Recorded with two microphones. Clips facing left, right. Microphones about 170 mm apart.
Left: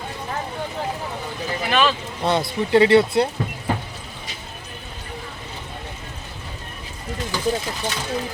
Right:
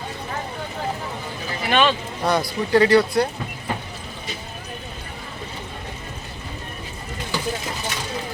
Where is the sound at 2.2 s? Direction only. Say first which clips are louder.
Even; 25° left (ahead or behind).